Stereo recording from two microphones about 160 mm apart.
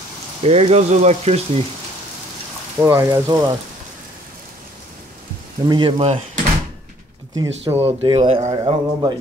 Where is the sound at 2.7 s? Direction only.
15° right (ahead or behind).